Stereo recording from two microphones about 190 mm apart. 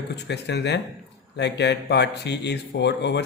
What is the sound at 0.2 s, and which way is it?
A man's voice, 60° left (ahead or behind).